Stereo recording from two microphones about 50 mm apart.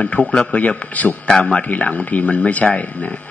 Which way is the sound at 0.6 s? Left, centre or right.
Left.